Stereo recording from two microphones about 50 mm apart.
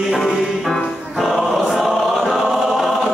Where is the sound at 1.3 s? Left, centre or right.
Centre.